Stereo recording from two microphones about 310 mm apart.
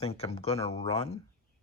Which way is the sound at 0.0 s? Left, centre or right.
Centre.